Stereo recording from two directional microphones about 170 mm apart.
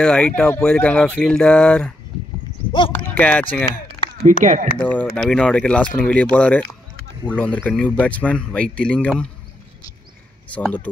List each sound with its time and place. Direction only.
0.0 s speech: 5° left (ahead or behind)
4.2 s speech: 50° right (ahead or behind)
4.7 s speech: 5° left (ahead or behind)